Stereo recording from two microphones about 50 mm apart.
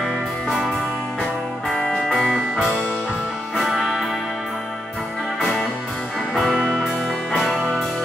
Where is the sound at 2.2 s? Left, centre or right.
Centre.